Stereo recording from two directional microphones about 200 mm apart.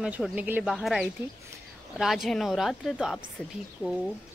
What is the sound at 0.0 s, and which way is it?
Speech, 5° right (ahead or behind).